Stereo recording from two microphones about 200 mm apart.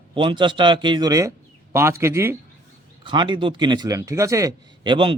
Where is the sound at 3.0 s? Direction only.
25° right (ahead or behind).